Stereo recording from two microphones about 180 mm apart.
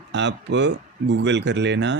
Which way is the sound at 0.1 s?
80° right.